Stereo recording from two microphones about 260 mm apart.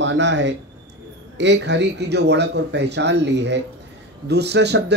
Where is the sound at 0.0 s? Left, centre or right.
Right.